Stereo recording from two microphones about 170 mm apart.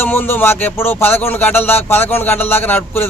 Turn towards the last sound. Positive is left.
turn(degrees=10)  # may be behind; listen again after turning